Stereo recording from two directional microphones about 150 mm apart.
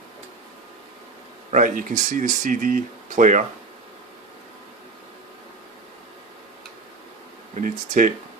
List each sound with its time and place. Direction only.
1.5 s speech: 60° right (ahead or behind)
7.5 s speech: 60° right (ahead or behind)